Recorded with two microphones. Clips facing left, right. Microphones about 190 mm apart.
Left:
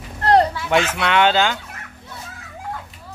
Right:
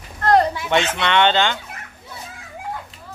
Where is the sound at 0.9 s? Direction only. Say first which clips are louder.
Left 1 dB; 5° left (ahead or behind).